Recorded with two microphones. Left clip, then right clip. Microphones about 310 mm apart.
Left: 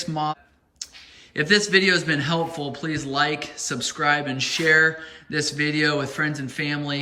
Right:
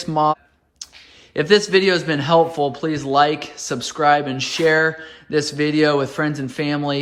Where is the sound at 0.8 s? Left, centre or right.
Centre.